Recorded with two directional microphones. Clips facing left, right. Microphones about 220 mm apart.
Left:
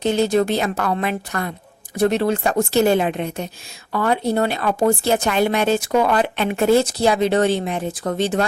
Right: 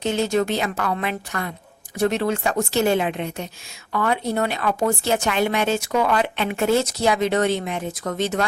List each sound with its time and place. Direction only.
0.0 s speech: 35° left (ahead or behind)